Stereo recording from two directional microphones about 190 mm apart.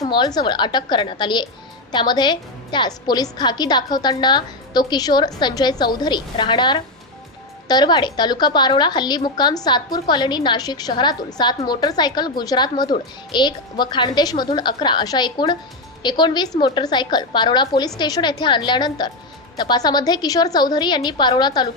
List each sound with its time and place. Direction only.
0.0 s a woman's voice: 20° left (ahead or behind)